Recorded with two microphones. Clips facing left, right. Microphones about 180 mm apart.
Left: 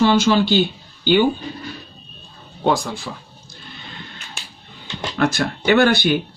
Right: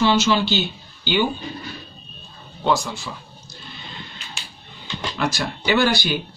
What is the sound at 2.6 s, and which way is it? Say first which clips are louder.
Speech: left 2 dB; 55° left (ahead or behind).